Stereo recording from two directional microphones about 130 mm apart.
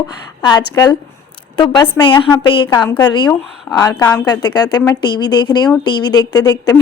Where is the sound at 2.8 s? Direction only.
15° left (ahead or behind).